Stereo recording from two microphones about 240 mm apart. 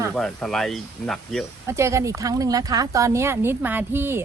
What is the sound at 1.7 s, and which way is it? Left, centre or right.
Speech, centre.